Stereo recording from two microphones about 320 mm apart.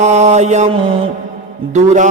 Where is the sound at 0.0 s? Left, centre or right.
Right.